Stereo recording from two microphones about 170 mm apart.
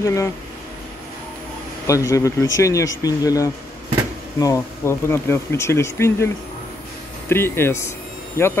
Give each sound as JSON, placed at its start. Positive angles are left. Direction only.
{"t": 0.0, "sound": "speech", "side_deg": 20}
{"t": 1.9, "sound": "speech", "side_deg": 20}